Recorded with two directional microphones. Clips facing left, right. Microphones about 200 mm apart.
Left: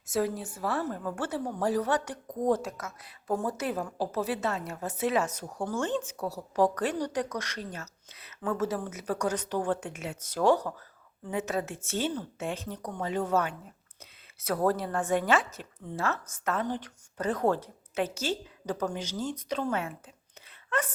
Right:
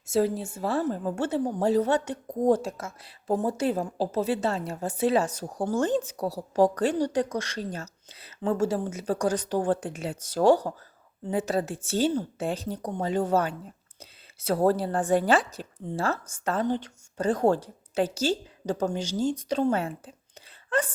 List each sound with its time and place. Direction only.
0.1 s a woman's voice: 30° right (ahead or behind)